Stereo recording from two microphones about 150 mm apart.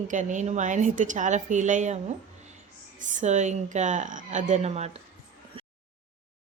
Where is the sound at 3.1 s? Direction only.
50° right (ahead or behind).